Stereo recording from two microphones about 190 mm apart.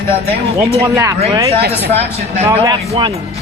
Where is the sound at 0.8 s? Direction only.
15° right (ahead or behind).